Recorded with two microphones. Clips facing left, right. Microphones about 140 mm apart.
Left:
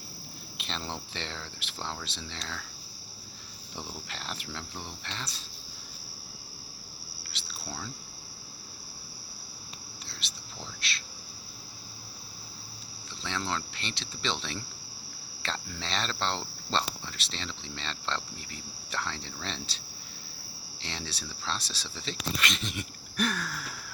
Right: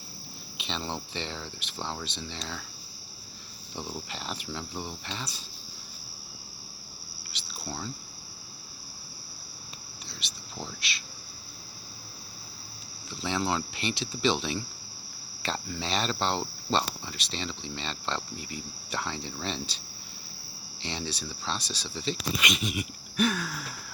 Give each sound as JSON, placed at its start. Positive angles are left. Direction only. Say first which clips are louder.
{"t": 0.6, "sound": "cricket", "louder": "right 3 dB", "side_deg": 0}
{"t": 3.8, "sound": "cricket", "louder": "right 4 dB", "side_deg": -5}
{"t": 7.3, "sound": "a sound", "louder": "right 3 dB", "side_deg": 0}
{"t": 10.1, "sound": "whispering", "louder": "right 2 dB", "side_deg": 0}
{"t": 10.8, "sound": "cricket", "louder": "even", "side_deg": 0}
{"t": 13.2, "sound": "speech", "louder": "right 5 dB", "side_deg": -10}
{"t": 15.4, "sound": "cricket", "louder": "right 4 dB", "side_deg": -5}
{"t": 20.8, "sound": "cricket", "louder": "right 5 dB", "side_deg": 0}